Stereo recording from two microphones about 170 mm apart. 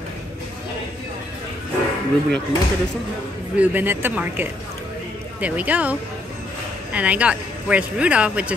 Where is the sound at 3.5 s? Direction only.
10° right (ahead or behind).